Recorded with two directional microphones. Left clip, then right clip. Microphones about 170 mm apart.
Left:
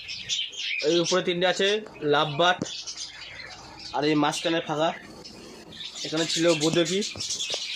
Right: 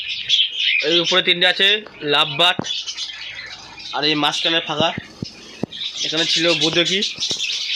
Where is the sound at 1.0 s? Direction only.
10° left (ahead or behind).